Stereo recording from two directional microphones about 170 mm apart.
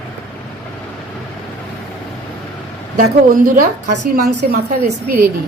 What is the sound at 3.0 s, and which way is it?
Speech, 55° right (ahead or behind).